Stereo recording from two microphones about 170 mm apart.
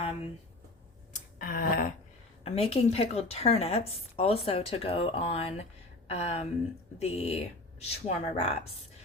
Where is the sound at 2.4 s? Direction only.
35° left (ahead or behind).